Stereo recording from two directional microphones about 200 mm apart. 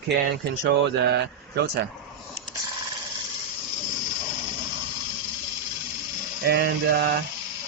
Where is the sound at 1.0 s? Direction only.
55° right (ahead or behind).